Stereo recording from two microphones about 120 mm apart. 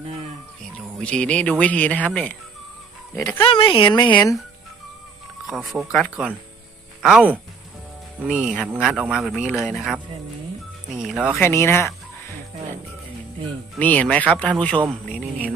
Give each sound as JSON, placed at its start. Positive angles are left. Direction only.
{"t": 0.9, "sound": "speech", "side_deg": 10}
{"t": 3.2, "sound": "speech", "side_deg": 25}
{"t": 3.4, "sound": "speech", "side_deg": 45}
{"t": 5.5, "sound": "speech", "side_deg": 0}
{"t": 11.3, "sound": "speech", "side_deg": 20}
{"t": 13.7, "sound": "speech", "side_deg": 15}